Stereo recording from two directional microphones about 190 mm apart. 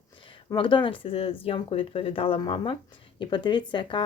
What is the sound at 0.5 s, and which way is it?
Speech, 25° left (ahead or behind).